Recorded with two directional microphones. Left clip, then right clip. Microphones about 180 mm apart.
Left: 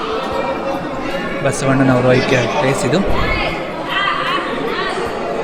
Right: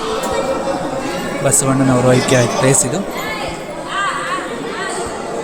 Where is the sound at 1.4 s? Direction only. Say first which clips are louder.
Even; 25° right (ahead or behind).